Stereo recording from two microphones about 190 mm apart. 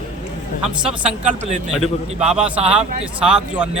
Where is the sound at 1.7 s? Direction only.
5° right (ahead or behind).